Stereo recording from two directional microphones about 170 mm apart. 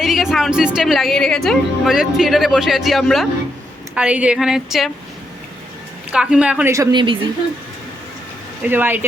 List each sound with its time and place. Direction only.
0.0 s a woman's voice: centre (ahead or behind)
6.1 s speech: 5° right (ahead or behind)
6.9 s speech: 30° right (ahead or behind)
8.6 s speech: 10° right (ahead or behind)